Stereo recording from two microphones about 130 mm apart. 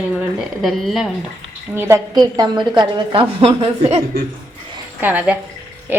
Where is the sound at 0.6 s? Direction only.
Centre (ahead or behind).